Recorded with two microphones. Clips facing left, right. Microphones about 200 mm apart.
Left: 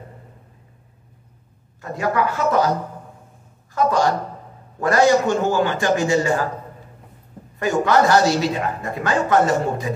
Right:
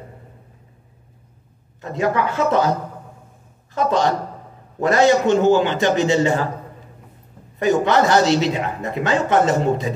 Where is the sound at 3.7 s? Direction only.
20° right (ahead or behind).